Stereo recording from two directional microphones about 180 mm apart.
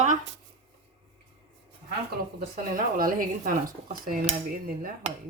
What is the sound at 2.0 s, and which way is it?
Speech, 55° right (ahead or behind).